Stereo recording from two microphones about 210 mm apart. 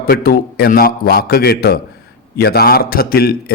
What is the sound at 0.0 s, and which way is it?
A man's voice, 45° left (ahead or behind).